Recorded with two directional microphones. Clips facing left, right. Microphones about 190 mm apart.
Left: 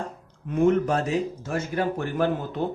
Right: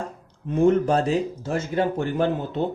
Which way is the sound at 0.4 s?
30° right (ahead or behind).